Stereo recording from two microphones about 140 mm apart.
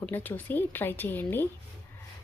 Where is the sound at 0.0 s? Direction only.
10° left (ahead or behind).